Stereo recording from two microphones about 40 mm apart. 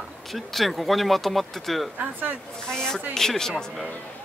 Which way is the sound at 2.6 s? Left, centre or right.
Centre.